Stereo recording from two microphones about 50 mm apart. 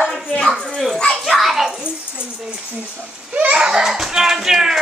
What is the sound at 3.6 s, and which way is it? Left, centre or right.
Dog, centre.